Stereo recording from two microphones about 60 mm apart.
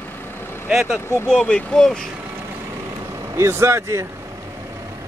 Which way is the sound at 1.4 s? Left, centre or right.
Centre.